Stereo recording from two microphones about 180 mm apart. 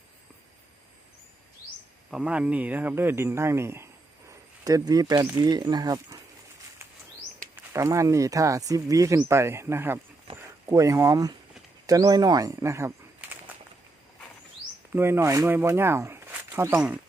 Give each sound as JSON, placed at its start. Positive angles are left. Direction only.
{"t": 2.0, "sound": "speech", "side_deg": -5}
{"t": 4.3, "sound": "a sound", "side_deg": -20}
{"t": 5.4, "sound": "speech", "side_deg": -25}
{"t": 7.5, "sound": "speech", "side_deg": -15}
{"t": 14.9, "sound": "speech", "side_deg": -15}